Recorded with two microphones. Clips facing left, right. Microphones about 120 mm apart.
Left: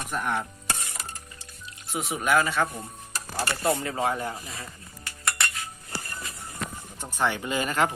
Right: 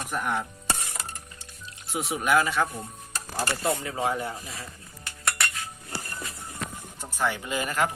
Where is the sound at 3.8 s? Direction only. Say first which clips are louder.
Left 1 dB; 15° right (ahead or behind).